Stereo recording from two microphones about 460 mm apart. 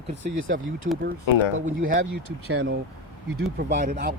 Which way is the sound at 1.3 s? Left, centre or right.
Left.